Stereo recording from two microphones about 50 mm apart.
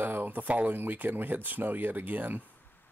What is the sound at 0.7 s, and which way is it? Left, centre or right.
Speech, right.